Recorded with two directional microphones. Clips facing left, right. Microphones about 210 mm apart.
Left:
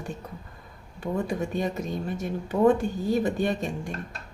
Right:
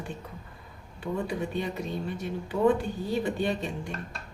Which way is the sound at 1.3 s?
45° left (ahead or behind).